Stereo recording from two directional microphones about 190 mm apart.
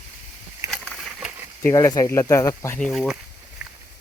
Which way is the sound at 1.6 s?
15° left (ahead or behind).